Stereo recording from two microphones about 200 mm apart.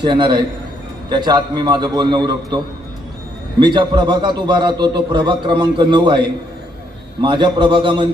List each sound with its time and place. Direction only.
0.0 s a man's voice: 25° right (ahead or behind)
3.6 s a man's voice: 20° right (ahead or behind)